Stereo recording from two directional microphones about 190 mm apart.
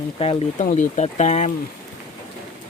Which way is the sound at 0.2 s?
30° left (ahead or behind).